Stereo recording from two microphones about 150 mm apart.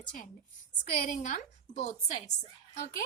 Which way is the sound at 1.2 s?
50° left (ahead or behind).